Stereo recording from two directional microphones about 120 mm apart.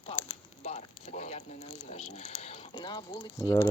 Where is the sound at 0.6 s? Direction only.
70° left (ahead or behind).